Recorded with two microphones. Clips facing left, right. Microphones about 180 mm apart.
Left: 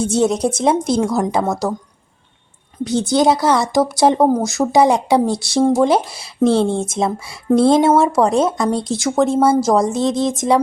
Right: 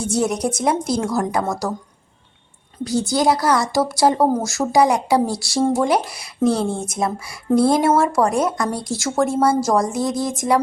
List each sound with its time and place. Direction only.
0.0 s speech: 25° left (ahead or behind)
2.8 s speech: 20° left (ahead or behind)